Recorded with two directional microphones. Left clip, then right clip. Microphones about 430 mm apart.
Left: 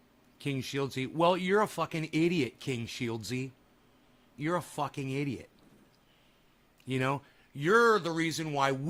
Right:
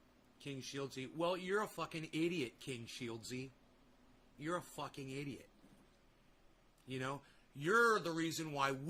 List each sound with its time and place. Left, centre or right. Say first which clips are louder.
0.3 s speech: left 12 dB; left
4.4 s speech: left 11 dB; left
6.8 s speech: left 12 dB; left